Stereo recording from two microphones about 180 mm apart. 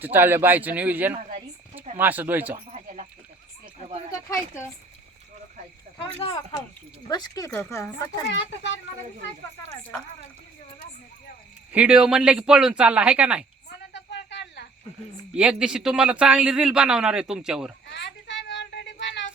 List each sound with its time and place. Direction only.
0.0 s speech: 10° right (ahead or behind)
1.1 s speech: 35° right (ahead or behind)
2.0 s speech: 10° right (ahead or behind)
2.6 s a sound: 40° right (ahead or behind)
6.1 s speech: 30° left (ahead or behind)
8.3 s speech: 80° left
11.7 s a man's voice: 5° right (ahead or behind)
13.9 s a sound: 75° left (ahead or behind)
15.4 s a man's voice: 5° right (ahead or behind)
17.9 s a sound: 75° left (ahead or behind)